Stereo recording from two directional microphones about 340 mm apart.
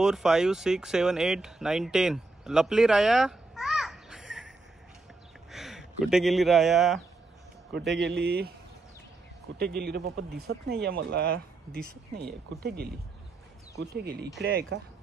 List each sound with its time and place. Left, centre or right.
0.0 s speech: centre
5.5 s speech: centre
7.9 s speech: right
9.6 s speech: right